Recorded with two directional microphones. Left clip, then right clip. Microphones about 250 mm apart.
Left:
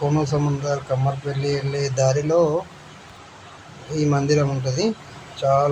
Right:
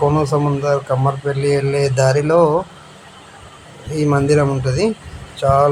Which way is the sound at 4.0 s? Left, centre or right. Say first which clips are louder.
Right 5 dB; centre.